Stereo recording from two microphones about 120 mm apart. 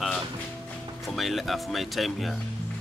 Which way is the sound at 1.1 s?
Centre (ahead or behind).